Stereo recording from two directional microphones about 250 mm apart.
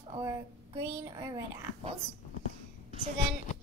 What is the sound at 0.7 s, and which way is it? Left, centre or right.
Speech, centre.